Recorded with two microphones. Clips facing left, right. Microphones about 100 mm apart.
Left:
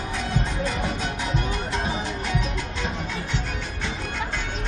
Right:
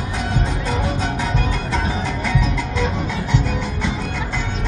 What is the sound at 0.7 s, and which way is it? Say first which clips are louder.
Music: right 5 dB; 70° right (ahead or behind).